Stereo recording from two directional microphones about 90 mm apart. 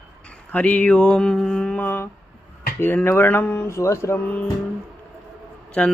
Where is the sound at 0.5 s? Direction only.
15° left (ahead or behind).